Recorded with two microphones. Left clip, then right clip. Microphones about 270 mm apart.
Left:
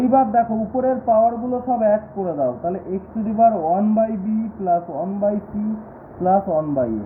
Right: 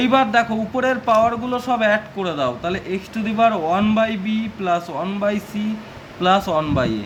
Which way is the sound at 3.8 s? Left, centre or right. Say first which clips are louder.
Even; right.